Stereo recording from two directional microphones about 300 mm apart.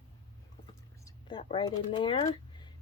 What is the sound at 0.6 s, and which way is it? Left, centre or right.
Speech, centre.